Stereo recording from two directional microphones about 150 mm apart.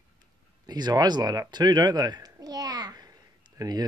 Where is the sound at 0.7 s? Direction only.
25° right (ahead or behind).